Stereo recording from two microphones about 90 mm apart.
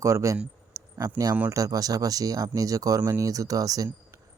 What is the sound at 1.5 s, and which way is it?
Speech, 40° right (ahead or behind).